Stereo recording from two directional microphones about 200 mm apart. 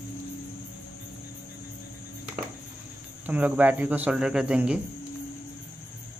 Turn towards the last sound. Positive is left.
turn(degrees=-5)  # may be behind; listen again after turning